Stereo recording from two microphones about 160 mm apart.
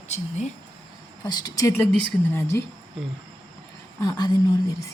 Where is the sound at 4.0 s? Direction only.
25° left (ahead or behind).